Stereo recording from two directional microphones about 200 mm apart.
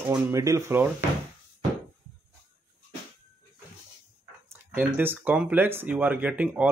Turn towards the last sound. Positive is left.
turn(degrees=-5)  # may be behind; listen again after turning